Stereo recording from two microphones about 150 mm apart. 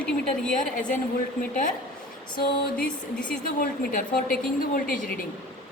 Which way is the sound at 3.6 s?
70° left (ahead or behind).